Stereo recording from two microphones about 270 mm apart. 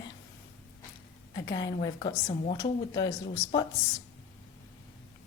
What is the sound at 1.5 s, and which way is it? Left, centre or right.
Speech, centre.